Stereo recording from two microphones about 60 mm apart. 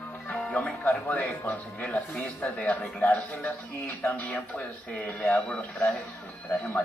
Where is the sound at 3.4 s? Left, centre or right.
Centre.